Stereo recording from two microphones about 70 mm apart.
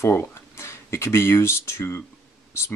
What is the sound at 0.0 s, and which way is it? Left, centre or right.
Speech, left.